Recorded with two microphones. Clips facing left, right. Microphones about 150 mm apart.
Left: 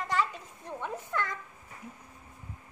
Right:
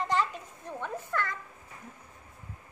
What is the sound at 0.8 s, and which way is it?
Speech, 15° left (ahead or behind).